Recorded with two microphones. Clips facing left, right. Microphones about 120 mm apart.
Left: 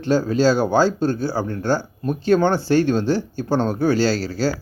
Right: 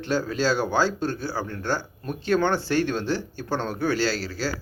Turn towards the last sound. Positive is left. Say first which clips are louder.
# left 6 dB
turn(degrees=40)  # may be behind; listen again after turning